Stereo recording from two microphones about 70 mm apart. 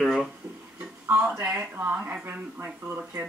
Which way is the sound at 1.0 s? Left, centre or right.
Right.